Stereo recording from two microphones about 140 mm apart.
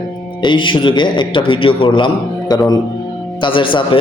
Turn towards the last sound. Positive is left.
turn(degrees=35)  # may be behind; listen again after turning